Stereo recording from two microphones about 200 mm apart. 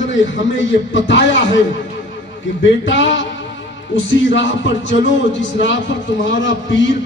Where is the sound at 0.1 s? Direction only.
70° left (ahead or behind).